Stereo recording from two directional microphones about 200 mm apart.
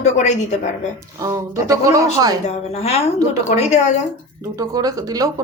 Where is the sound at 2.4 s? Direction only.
30° left (ahead or behind).